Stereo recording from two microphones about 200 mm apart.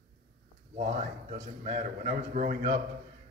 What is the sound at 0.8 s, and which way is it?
A man's voice, 35° right (ahead or behind).